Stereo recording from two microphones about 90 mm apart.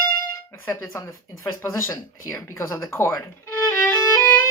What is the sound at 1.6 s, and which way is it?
Speech, 30° left (ahead or behind).